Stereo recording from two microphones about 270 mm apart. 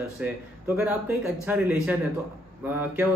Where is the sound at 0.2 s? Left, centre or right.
Centre.